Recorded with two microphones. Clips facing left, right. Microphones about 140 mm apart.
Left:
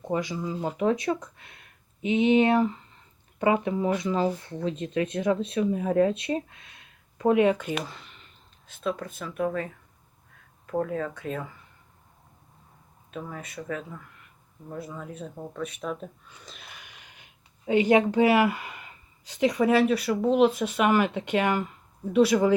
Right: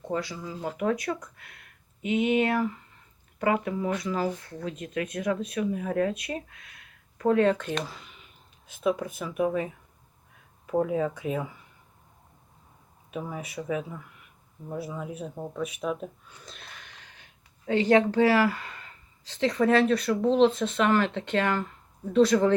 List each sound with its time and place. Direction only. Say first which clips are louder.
0.1 s speech: left 3 dB; 20° left (ahead or behind); by 11.5 s 10° right (ahead or behind)
13.1 s speech: right 2 dB; 10° right (ahead or behind); by 22.5 s 10° left (ahead or behind)